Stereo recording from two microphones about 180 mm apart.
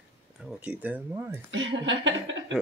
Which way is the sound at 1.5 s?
90° right.